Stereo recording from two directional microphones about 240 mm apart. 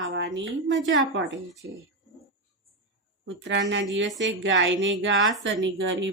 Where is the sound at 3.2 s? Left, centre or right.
Right.